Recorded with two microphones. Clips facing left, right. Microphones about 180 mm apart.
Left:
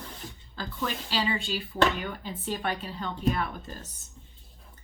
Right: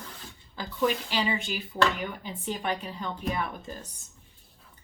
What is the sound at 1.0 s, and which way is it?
Speech, 15° right (ahead or behind).